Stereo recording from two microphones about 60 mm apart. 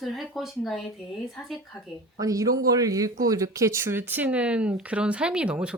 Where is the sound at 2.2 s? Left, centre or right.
Right.